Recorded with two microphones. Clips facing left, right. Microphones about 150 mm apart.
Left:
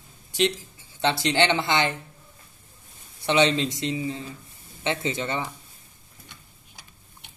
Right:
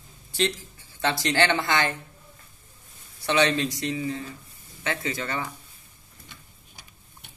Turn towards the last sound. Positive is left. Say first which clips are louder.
# left 2 dB
turn(degrees=25)  # may be behind; listen again after turning